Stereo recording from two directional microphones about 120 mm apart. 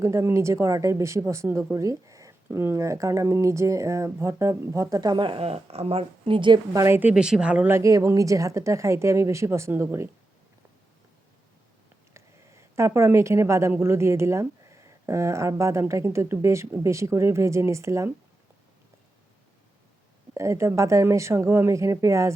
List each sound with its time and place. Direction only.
0.0 s a woman's voice: 25° right (ahead or behind); by 6.6 s 45° right (ahead or behind)
6.7 s a woman's voice: 20° right (ahead or behind)
7.1 s speech: 5° right (ahead or behind)
7.7 s a woman's voice: 25° right (ahead or behind)
12.1 s a woman's voice: 25° right (ahead or behind)
20.3 s a woman's voice: 25° right (ahead or behind)